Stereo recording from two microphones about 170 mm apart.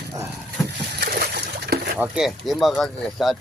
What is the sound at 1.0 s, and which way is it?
Splash, 70° right (ahead or behind).